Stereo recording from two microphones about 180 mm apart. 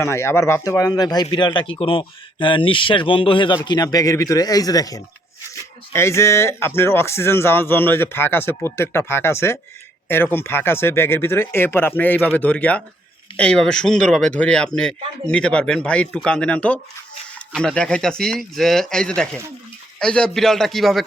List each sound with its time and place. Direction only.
0.0 s speech: 15° left (ahead or behind)